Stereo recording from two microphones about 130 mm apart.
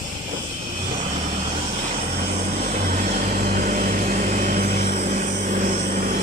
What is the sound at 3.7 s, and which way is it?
Vehicle, 90° right.